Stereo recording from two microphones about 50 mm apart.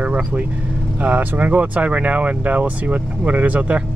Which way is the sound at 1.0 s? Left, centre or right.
Right.